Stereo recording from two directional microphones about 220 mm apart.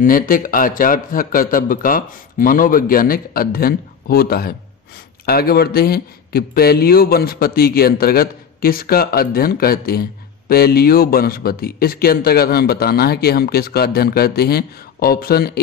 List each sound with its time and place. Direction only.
0.0 s a man's voice: 40° left (ahead or behind)